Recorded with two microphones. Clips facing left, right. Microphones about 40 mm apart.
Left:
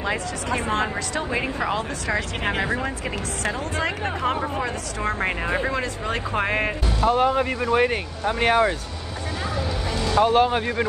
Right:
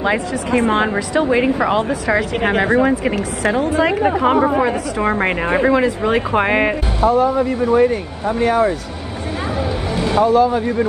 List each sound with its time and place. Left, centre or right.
0.0 s a woman's voice: right
1.2 s speech: centre
2.6 s speech: right
5.2 s speech: right
7.1 s speech: left
9.9 s vehicle: right
10.2 s speech: left